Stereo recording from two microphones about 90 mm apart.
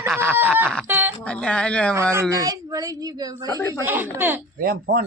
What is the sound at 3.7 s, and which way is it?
Speech, 25° right (ahead or behind).